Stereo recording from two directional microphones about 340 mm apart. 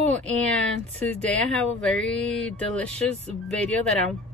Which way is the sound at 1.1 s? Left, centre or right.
Centre.